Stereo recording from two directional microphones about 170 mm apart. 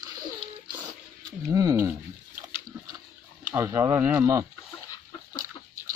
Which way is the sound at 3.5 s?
15° right (ahead or behind).